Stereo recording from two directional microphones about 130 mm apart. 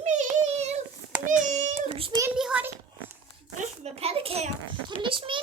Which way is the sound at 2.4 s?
5° right (ahead or behind).